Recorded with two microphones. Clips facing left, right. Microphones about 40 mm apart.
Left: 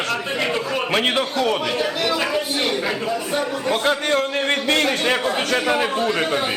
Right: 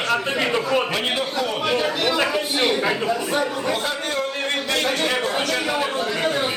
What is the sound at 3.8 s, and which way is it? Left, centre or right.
Speech, left.